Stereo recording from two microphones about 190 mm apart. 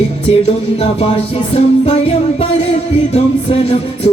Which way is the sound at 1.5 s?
30° left (ahead or behind).